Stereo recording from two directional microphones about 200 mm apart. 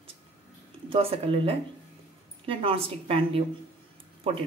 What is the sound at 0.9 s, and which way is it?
Speech, 30° right (ahead or behind).